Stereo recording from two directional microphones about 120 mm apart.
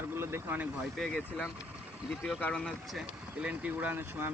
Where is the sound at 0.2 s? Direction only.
20° right (ahead or behind).